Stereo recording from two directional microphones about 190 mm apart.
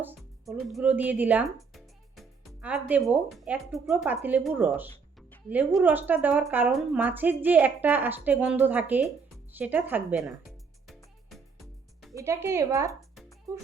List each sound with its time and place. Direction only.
0.2 s speech: centre (ahead or behind)
5.5 s a woman's voice: 10° right (ahead or behind)
10.8 s music: centre (ahead or behind)
12.1 s a woman's voice: 15° right (ahead or behind)